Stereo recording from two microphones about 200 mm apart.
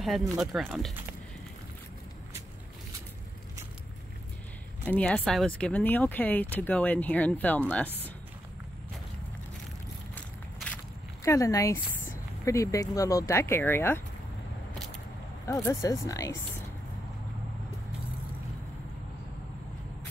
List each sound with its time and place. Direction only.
0.4 s speech: centre (ahead or behind)
4.8 s speech: 5° left (ahead or behind)
10.1 s a sound: 5° left (ahead or behind)
11.2 s speech: 15° left (ahead or behind)
15.4 s speech: 15° left (ahead or behind)